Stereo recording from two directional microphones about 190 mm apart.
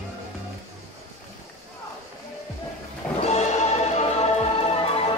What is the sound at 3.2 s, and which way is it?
Music, 35° left (ahead or behind).